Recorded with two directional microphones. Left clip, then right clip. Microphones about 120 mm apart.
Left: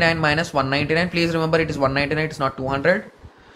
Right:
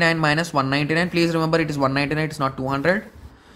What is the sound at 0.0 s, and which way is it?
Speech, 55° right (ahead or behind).